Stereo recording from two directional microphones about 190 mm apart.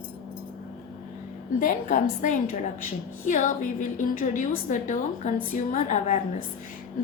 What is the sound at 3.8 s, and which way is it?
A woman's voice, 40° left (ahead or behind).